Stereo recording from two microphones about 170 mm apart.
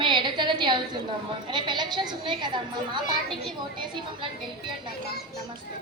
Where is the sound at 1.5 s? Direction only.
25° right (ahead or behind).